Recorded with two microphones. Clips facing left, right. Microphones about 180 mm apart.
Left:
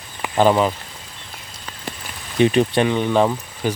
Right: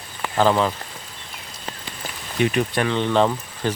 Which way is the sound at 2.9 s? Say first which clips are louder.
Left 2 dB; 10° left (ahead or behind).